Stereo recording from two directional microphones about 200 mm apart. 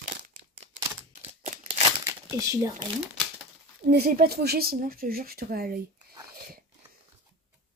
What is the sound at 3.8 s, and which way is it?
Speech, 50° right (ahead or behind).